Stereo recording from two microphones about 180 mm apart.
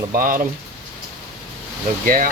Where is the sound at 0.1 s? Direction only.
50° right (ahead or behind).